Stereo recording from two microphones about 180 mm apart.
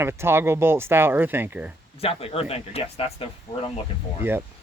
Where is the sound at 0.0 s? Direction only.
15° right (ahead or behind).